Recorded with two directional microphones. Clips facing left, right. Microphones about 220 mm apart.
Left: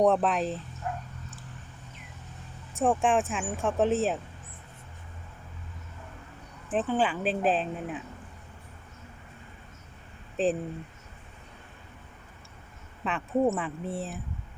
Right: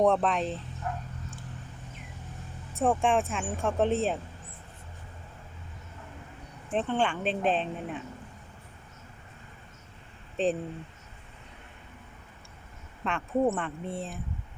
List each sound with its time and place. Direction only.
0.0 s speech: 5° left (ahead or behind)
2.7 s speech: centre (ahead or behind)
6.7 s speech: 5° left (ahead or behind)
10.3 s speech: centre (ahead or behind)
13.1 s speech: centre (ahead or behind)